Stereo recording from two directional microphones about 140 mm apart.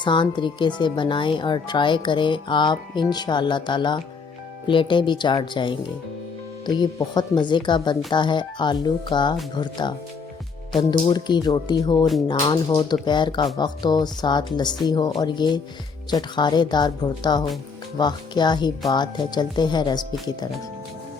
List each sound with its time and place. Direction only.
0.0 s speech: 35° left (ahead or behind)